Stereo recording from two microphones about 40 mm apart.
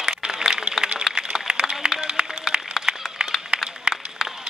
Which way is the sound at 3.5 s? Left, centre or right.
Right.